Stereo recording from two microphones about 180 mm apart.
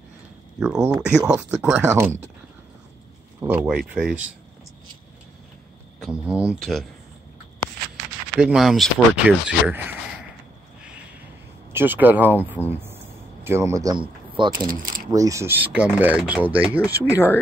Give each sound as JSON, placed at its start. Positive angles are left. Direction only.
{"t": 0.6, "sound": "speech", "side_deg": -5}
{"t": 3.3, "sound": "speech", "side_deg": -10}
{"t": 5.9, "sound": "speech", "side_deg": -5}
{"t": 8.4, "sound": "speech", "side_deg": -5}
{"t": 11.7, "sound": "speech", "side_deg": -10}
{"t": 12.7, "sound": "a sound", "side_deg": -15}
{"t": 14.7, "sound": "speech", "side_deg": -50}
{"t": 15.1, "sound": "speech", "side_deg": -15}